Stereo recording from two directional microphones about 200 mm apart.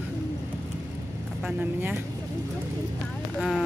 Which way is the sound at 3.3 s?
Centre (ahead or behind).